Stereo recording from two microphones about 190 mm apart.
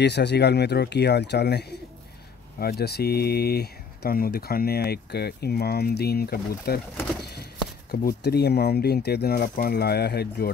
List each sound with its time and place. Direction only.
0.0 s speech: 60° left (ahead or behind)
7.9 s speech: 55° left (ahead or behind)